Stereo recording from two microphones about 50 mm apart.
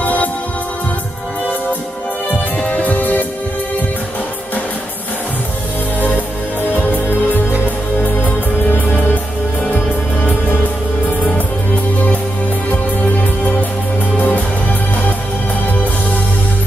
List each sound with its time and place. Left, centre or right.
0.0 s music: left
2.6 s music: left
13.4 s music: left